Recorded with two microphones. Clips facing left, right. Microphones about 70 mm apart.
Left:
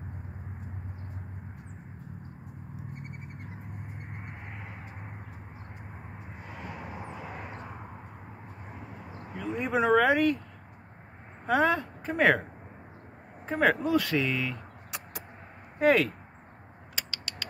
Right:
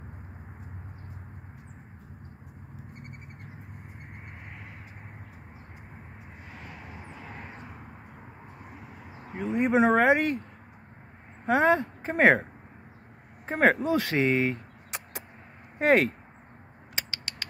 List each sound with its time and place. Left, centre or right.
6.4 s vehicle: left
9.3 s speech: right
11.4 s speech: right
13.5 s speech: right
13.8 s speech: right
15.8 s speech: right